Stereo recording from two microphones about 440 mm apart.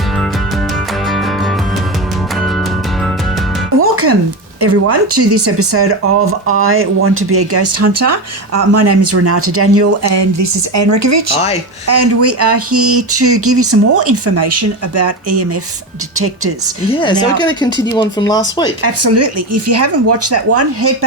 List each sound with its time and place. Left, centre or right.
3.8 s music: right
4.6 s speech: right
16.9 s speech: centre
18.8 s speech: right